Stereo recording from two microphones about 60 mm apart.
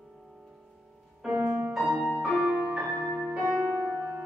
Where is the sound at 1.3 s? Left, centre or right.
Right.